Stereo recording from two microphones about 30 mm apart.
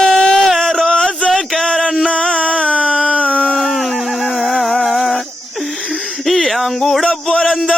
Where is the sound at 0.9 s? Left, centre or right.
Left.